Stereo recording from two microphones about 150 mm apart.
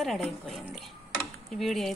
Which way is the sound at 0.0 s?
Centre (ahead or behind).